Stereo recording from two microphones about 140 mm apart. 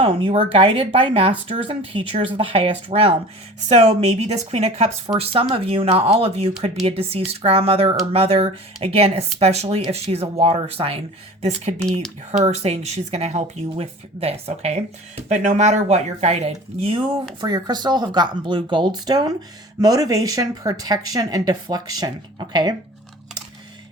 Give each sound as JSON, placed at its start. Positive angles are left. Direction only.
{"t": 0.0, "sound": "speech", "side_deg": -40}
{"t": 12.4, "sound": "speech", "side_deg": -50}
{"t": 17.4, "sound": "speech", "side_deg": -30}